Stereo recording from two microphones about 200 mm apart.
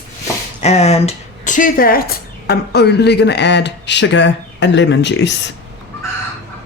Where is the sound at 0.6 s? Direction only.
30° left (ahead or behind); by 5.3 s 60° left (ahead or behind).